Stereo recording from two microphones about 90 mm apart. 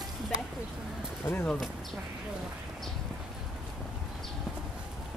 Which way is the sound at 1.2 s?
25° left (ahead or behind).